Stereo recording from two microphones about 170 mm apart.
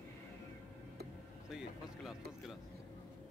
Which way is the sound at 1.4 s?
5° right (ahead or behind).